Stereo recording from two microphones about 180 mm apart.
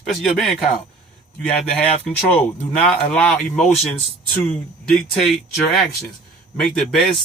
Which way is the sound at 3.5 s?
40° left (ahead or behind).